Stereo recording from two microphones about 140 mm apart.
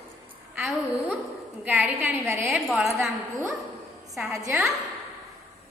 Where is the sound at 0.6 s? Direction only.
Centre (ahead or behind).